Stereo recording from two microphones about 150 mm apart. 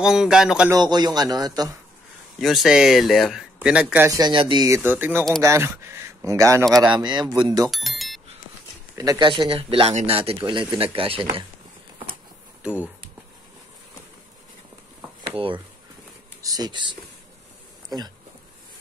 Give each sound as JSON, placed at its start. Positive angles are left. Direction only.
{"t": 0.0, "sound": "speech", "side_deg": -5}
{"t": 0.7, "sound": "speech", "side_deg": -25}
{"t": 2.4, "sound": "speech", "side_deg": 0}
{"t": 4.2, "sound": "speech", "side_deg": -35}
{"t": 4.6, "sound": "speech", "side_deg": -15}
{"t": 7.7, "sound": "speech", "side_deg": 0}
{"t": 8.9, "sound": "speech", "side_deg": -25}
{"t": 15.2, "sound": "speech", "side_deg": -35}